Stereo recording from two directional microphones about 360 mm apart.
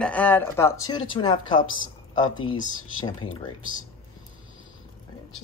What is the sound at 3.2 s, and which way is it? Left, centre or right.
Speech, centre.